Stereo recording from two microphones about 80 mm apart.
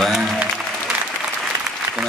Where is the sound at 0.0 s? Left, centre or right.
Centre.